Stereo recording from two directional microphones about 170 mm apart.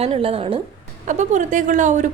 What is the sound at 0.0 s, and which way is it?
Speech, 35° right (ahead or behind).